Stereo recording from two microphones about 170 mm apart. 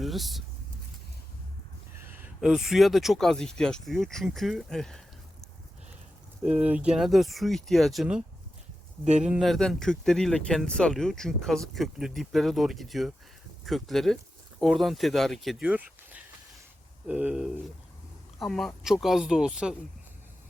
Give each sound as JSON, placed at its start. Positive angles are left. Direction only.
{"t": 0.0, "sound": "speech", "side_deg": 0}
{"t": 2.0, "sound": "speech", "side_deg": -10}
{"t": 6.4, "sound": "speech", "side_deg": -5}
{"t": 9.0, "sound": "speech", "side_deg": -45}
{"t": 9.3, "sound": "speech", "side_deg": 0}